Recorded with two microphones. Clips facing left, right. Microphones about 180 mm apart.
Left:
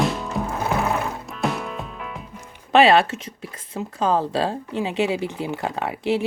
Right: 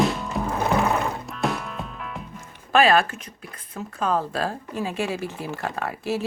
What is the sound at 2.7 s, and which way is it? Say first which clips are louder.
Speech: left 3 dB; 25° left (ahead or behind).